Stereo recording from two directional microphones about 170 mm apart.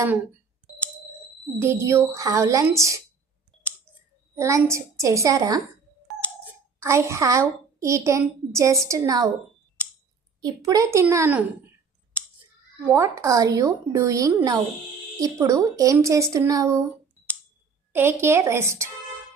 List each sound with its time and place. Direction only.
1.6 s speech: 15° right (ahead or behind)
4.4 s speech: 15° right (ahead or behind)
6.7 s a child's voice: 15° right (ahead or behind)
10.4 s a woman's voice: 20° right (ahead or behind)
12.1 s scissors: 10° left (ahead or behind)
12.9 s a woman's voice: 15° right (ahead or behind)
17.9 s speech: 15° right (ahead or behind)